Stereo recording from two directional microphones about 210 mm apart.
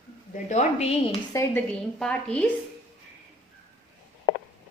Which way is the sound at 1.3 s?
15° left (ahead or behind).